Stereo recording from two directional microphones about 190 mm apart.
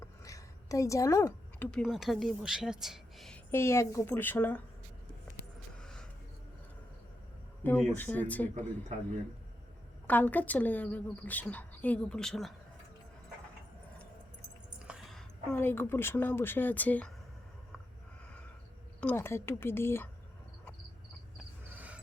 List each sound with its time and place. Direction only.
0.0 s a woman's voice: 15° left (ahead or behind)
5.8 s a sound: 5° left (ahead or behind)
7.6 s a woman's voice: 10° left (ahead or behind)
10.1 s a woman's voice: 10° left (ahead or behind)
14.8 s a woman's voice: 5° right (ahead or behind)
18.9 s a woman's voice: 10° left (ahead or behind)
21.7 s cricket: 10° right (ahead or behind)